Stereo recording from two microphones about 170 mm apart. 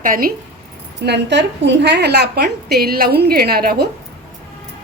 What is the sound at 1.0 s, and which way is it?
A woman's voice, 85° right.